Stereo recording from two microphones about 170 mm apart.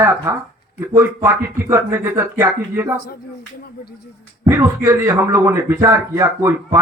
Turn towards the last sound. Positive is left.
turn(degrees=-15)  # may be behind; listen again after turning